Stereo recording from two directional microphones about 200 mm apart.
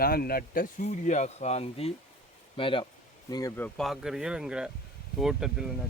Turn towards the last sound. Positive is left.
turn(degrees=0)  # may be behind; listen again after turning